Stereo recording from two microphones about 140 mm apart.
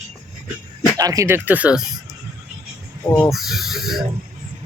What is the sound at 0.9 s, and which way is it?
Speech, 25° right (ahead or behind).